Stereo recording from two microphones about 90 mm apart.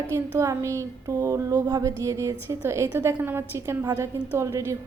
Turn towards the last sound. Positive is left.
turn(degrees=-35)  # may be behind; listen again after turning